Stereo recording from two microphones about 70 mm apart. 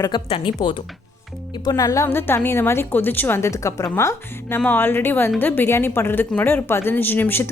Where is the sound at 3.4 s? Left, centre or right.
Left.